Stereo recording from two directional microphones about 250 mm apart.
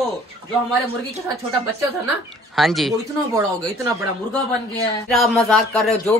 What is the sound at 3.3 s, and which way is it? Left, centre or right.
Speech, centre.